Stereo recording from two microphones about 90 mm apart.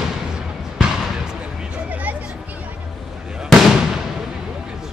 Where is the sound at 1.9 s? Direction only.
15° right (ahead or behind).